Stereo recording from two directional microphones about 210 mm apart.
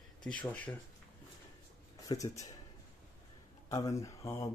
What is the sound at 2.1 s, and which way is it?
Speech, 15° left (ahead or behind).